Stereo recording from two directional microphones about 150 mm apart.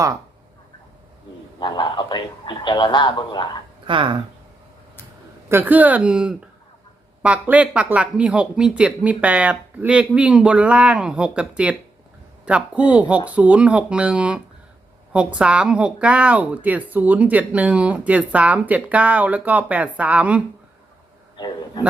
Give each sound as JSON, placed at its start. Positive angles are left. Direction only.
{"t": 1.5, "sound": "speech", "side_deg": 30}
{"t": 3.8, "sound": "speech", "side_deg": -35}
{"t": 5.5, "sound": "a woman's voice", "side_deg": -15}
{"t": 21.3, "sound": "a man's voice", "side_deg": 30}